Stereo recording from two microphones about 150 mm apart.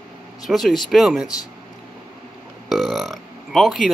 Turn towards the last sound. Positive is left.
turn(degrees=0)  # may be behind; listen again after turning